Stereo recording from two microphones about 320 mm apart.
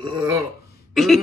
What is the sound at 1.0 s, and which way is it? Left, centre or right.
Throat clearing, centre.